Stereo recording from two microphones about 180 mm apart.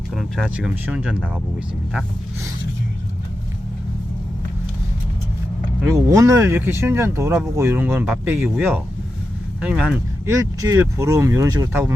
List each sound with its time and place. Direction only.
0.2 s speech: centre (ahead or behind)
5.9 s speech: 15° right (ahead or behind)
10.2 s speech: 20° right (ahead or behind)